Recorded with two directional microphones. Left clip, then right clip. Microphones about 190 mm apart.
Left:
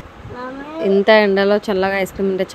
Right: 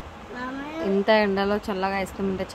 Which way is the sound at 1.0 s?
25° left (ahead or behind).